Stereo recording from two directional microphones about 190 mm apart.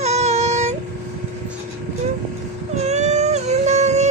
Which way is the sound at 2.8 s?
35° right (ahead or behind).